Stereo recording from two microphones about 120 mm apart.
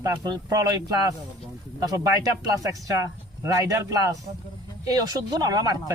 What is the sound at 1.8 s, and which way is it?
Speech, 30° right (ahead or behind).